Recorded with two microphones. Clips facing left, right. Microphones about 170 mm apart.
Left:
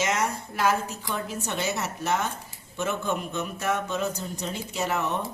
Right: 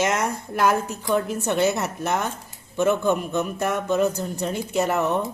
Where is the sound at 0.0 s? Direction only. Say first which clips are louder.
Right 4 dB; 55° right (ahead or behind).